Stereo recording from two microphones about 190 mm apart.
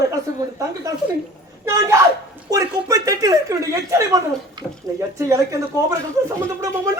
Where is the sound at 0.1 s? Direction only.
15° right (ahead or behind).